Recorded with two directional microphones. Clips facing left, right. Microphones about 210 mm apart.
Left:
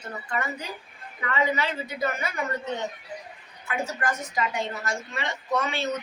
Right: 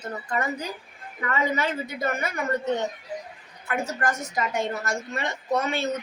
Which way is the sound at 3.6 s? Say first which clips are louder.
Right 2 dB; 45° right (ahead or behind).